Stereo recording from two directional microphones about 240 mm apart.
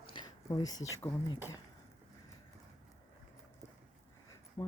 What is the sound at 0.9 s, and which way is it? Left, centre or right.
Speech, centre.